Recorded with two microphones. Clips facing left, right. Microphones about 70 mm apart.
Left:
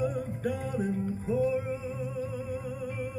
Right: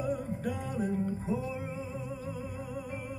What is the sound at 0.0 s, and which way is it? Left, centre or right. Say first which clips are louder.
Music: left 2 dB; left.